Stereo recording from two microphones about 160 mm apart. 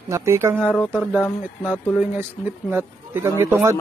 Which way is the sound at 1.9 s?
10° right (ahead or behind).